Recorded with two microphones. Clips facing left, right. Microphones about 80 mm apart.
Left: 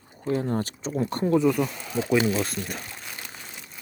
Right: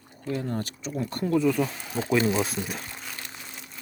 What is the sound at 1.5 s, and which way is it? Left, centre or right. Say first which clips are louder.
Speech: left 1 dB; centre.